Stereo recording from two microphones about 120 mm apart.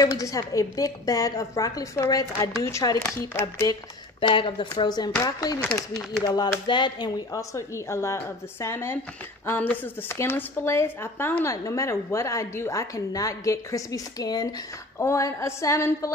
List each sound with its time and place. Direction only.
0.0 s a woman's voice: 30° left (ahead or behind)
3.2 s speech: 20° left (ahead or behind)
4.2 s speech: 45° left (ahead or behind)
7.3 s a woman's voice: 25° left (ahead or behind)